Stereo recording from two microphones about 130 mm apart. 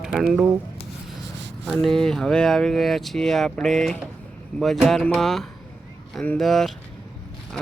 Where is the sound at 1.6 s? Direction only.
5° left (ahead or behind).